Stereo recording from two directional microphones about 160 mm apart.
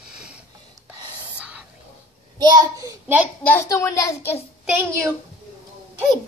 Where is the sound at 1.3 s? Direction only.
5° right (ahead or behind).